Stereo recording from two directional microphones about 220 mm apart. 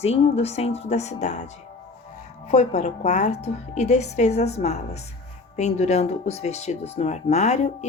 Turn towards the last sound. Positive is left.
turn(degrees=30)  # may be behind; listen again after turning